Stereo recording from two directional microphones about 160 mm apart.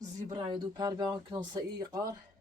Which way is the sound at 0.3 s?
25° right (ahead or behind).